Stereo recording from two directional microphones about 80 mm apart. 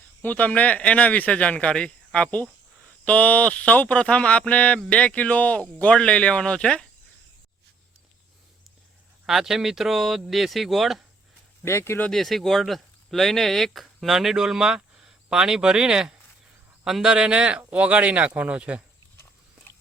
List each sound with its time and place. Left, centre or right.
0.2 s speech: centre
9.2 s speech: centre
11.6 s speech: left
12.1 s speech: centre
19.1 s pig: left